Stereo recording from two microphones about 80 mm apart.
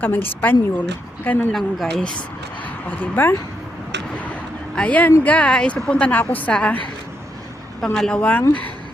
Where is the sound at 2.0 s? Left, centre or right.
Centre.